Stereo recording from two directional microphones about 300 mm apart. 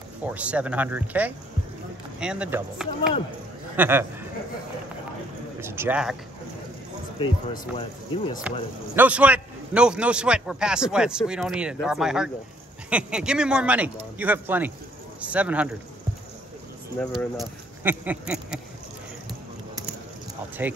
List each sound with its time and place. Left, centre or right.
0.2 s a man's voice: centre
5.6 s speech: centre
7.2 s speech: left
8.9 s a man's voice: centre
17.0 s speech: centre
20.6 s speech: centre